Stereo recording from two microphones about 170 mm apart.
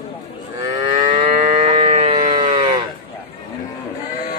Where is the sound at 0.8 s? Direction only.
25° right (ahead or behind).